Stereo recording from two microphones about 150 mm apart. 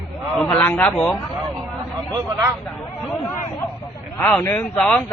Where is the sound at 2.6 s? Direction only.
5° left (ahead or behind).